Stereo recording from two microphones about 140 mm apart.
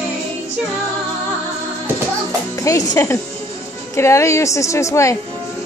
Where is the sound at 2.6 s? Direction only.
25° left (ahead or behind).